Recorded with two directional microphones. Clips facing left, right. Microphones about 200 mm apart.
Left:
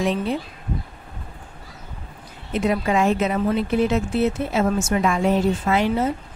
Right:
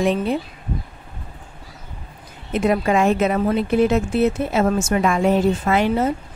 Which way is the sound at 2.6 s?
55° right (ahead or behind).